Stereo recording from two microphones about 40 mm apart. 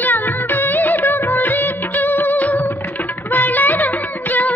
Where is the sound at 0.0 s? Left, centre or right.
Left.